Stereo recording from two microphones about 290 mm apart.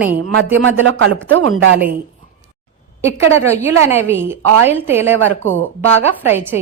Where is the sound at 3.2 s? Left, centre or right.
Right.